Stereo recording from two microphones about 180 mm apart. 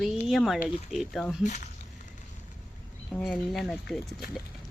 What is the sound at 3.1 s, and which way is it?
Speech, 5° left (ahead or behind).